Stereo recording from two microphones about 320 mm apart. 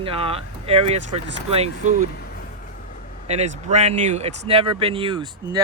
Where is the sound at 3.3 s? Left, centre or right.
Right.